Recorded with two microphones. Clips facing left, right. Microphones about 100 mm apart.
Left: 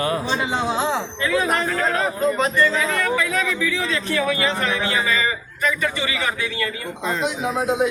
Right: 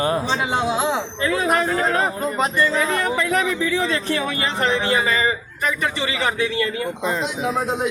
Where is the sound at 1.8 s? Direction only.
30° right (ahead or behind).